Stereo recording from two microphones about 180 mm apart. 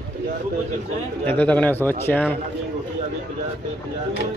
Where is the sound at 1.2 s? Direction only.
10° left (ahead or behind).